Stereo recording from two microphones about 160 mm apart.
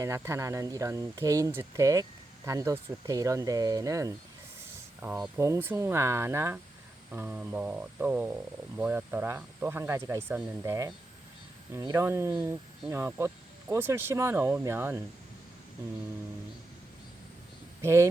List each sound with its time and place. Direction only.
0.0 s speech: 20° right (ahead or behind)
17.8 s speech: 15° right (ahead or behind)